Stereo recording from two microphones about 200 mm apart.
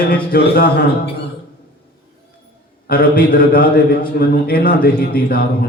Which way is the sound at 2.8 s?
45° left (ahead or behind).